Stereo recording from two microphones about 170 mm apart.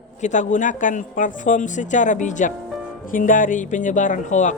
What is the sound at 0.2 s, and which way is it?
Speech, 45° left (ahead or behind).